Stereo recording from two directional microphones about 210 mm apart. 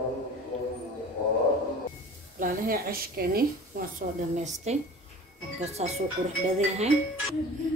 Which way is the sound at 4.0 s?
35° right (ahead or behind).